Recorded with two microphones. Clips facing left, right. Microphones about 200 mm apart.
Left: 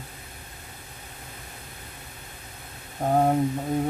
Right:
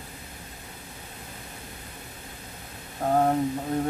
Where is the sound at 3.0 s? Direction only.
15° left (ahead or behind).